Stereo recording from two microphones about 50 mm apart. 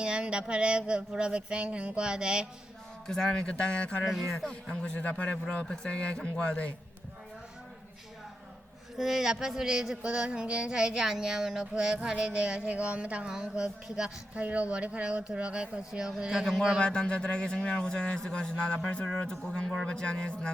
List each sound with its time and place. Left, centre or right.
0.0 s a sound: centre
3.1 s speech: centre
4.3 s a man's voice: centre
4.7 s speech: centre
5.6 s speech: centre
9.0 s speech: centre
12.0 s a sound: centre
13.3 s speech: centre
14.3 s a sound: right; by 16.5 s centre
16.8 s a man's voice: centre